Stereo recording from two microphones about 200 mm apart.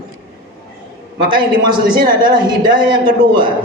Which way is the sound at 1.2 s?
25° right (ahead or behind).